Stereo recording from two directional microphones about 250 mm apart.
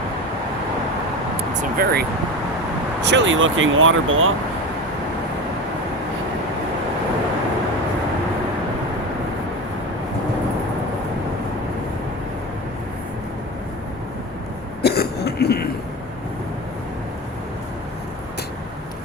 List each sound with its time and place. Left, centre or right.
1.8 s speech: right
14.8 s cough: left